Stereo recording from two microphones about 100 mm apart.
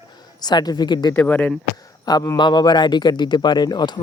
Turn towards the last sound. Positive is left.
turn(degrees=45)  # may be behind; listen again after turning